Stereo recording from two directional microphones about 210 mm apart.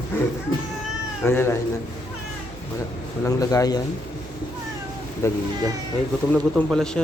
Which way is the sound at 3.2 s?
15° left (ahead or behind).